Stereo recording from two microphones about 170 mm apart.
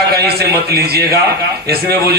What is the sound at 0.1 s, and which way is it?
A man's voice, 65° right (ahead or behind).